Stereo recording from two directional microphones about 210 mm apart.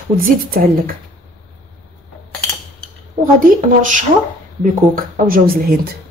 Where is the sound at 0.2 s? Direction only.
45° right (ahead or behind).